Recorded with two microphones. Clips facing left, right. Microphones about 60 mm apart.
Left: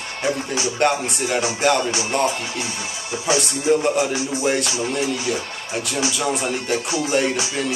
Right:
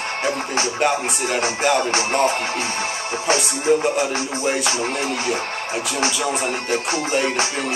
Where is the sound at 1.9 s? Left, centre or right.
Right.